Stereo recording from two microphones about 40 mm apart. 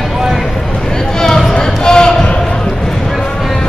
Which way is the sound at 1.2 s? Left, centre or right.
Centre.